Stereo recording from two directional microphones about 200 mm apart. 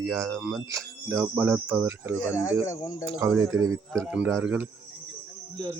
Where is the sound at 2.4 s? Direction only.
15° left (ahead or behind).